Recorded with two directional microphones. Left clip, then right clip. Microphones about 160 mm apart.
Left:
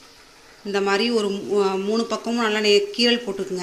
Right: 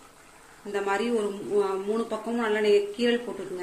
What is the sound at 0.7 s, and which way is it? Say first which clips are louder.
Speech: left 6 dB; 50° left (ahead or behind).